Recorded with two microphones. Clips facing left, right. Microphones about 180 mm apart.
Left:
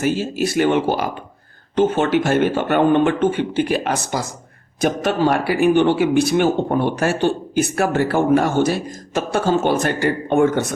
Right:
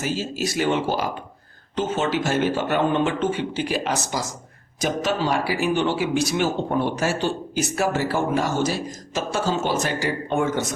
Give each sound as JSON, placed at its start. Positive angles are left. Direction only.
{"t": 0.0, "sound": "speech", "side_deg": 60}